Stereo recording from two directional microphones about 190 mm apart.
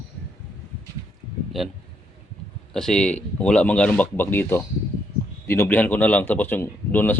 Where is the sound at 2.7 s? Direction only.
5° left (ahead or behind).